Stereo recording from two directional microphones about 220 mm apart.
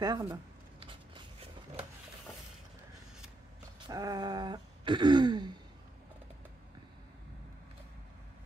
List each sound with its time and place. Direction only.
0.0 s speech: 15° right (ahead or behind)
0.7 s a sound: 20° right (ahead or behind)
3.8 s throat clearing: 15° right (ahead or behind)